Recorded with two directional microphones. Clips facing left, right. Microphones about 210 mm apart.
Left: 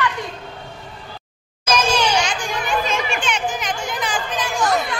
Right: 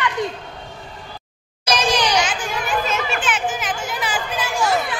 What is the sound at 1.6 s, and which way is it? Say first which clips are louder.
Children playing: left 1 dB; 15° right (ahead or behind).